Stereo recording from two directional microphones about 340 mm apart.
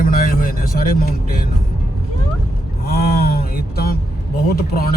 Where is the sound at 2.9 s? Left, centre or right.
Left.